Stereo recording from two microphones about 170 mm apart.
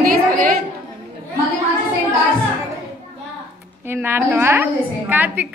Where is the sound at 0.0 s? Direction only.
55° right (ahead or behind).